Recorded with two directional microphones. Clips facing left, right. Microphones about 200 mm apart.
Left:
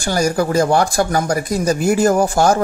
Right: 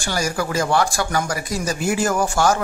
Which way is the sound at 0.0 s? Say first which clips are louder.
Left 6 dB; 40° left (ahead or behind).